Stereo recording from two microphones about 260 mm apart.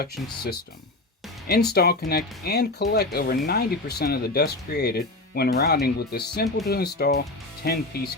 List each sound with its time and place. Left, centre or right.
1.5 s speech: left